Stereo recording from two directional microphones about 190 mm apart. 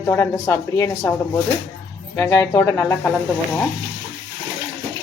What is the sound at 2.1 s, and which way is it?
Speech, 15° left (ahead or behind).